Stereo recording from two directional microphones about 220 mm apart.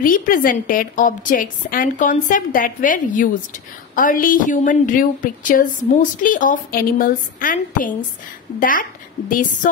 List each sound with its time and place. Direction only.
0.0 s a woman's voice: 40° left (ahead or behind)